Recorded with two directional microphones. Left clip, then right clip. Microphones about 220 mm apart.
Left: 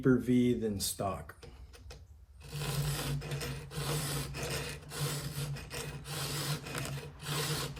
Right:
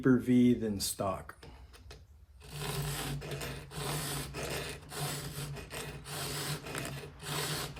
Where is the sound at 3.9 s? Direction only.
15° right (ahead or behind).